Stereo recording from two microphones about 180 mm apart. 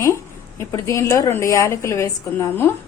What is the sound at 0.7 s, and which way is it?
A woman's voice, 15° left (ahead or behind).